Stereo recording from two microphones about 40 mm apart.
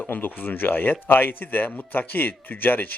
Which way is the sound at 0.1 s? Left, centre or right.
Left.